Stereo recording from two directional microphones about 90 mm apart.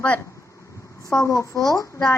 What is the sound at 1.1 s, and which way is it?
A woman's voice, 35° left (ahead or behind).